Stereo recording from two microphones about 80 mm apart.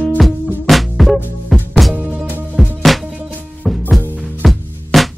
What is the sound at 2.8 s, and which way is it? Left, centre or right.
Music, centre.